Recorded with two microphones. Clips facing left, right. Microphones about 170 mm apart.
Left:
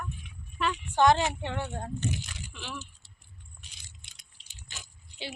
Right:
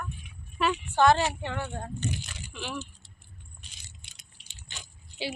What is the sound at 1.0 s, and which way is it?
Speech, 15° left (ahead or behind).